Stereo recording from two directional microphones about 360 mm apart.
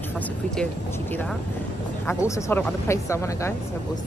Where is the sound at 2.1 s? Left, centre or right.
Centre.